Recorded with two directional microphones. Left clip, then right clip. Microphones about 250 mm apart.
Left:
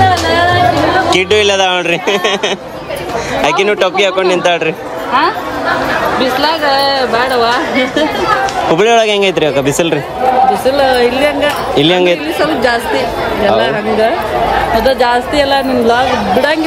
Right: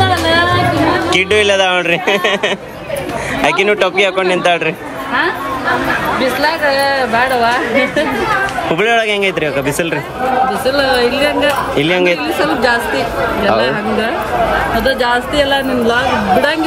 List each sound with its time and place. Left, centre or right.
1.1 s speech: centre
3.4 s speech: centre
6.4 s speech: centre
8.7 s speech: centre
10.6 s a woman's voice: centre
13.4 s a woman's voice: centre